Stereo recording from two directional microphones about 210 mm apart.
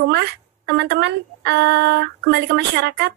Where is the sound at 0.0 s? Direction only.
55° right (ahead or behind).